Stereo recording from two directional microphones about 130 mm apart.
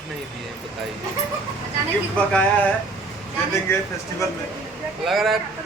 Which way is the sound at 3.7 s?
20° left (ahead or behind).